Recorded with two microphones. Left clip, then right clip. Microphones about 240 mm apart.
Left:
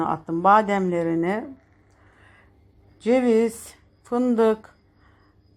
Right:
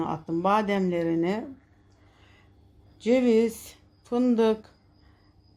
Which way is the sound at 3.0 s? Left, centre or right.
Centre.